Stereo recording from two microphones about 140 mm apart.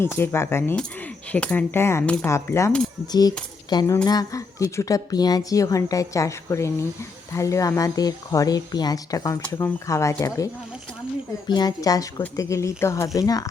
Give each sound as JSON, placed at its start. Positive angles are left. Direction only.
{"t": 0.0, "sound": "a woman's voice", "side_deg": 15}
{"t": 3.7, "sound": "a sound", "side_deg": 30}
{"t": 4.0, "sound": "a woman's voice", "side_deg": 25}